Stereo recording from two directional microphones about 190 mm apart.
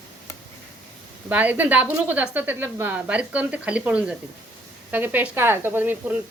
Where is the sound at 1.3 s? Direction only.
10° right (ahead or behind).